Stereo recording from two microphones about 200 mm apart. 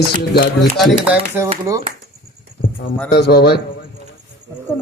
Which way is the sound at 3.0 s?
55° left (ahead or behind).